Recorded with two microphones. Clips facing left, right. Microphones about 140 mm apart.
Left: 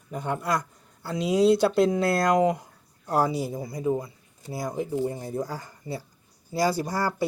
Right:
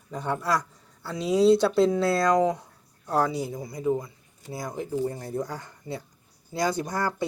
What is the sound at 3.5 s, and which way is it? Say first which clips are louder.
Speech: even; 25° left (ahead or behind).